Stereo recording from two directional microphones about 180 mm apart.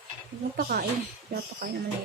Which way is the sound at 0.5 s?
55° right (ahead or behind).